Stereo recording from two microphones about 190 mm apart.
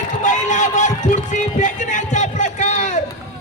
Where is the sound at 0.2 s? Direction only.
40° left (ahead or behind).